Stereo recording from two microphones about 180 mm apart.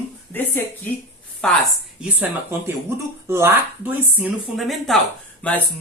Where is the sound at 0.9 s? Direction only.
10° left (ahead or behind).